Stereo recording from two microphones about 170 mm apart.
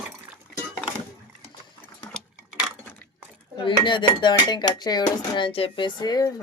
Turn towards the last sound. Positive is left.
turn(degrees=25)  # may be behind; listen again after turning